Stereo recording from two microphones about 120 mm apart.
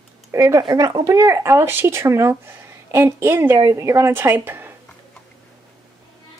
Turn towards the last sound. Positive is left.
turn(degrees=-15)  # may be behind; listen again after turning